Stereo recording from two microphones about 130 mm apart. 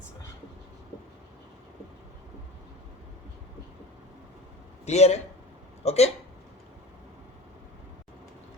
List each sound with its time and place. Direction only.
4.9 s a man's voice: 55° left (ahead or behind)